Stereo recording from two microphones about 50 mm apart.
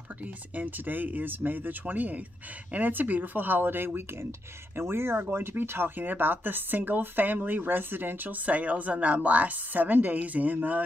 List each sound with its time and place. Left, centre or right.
0.6 s a woman's voice: right
8.5 s a woman's voice: right